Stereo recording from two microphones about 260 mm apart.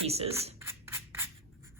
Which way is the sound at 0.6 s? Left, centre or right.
Centre.